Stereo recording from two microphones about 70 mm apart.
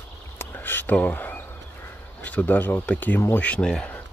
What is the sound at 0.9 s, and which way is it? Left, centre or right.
Speech, left.